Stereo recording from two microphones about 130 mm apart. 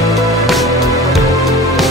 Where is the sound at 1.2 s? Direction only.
25° right (ahead or behind).